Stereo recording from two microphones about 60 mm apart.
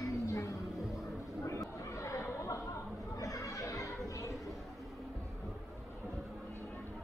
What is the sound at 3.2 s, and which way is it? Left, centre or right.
Chatter, left.